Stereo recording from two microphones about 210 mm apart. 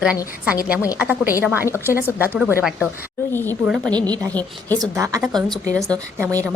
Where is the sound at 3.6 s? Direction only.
5° right (ahead or behind).